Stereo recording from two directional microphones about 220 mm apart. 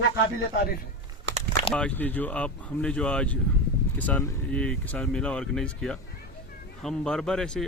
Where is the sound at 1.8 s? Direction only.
5° left (ahead or behind).